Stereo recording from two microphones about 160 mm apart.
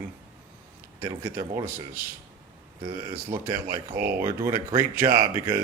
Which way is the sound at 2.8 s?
30° right (ahead or behind).